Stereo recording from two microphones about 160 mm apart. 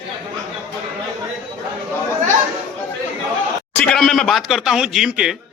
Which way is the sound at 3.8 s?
5° left (ahead or behind).